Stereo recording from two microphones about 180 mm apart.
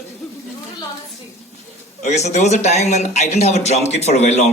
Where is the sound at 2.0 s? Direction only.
40° left (ahead or behind).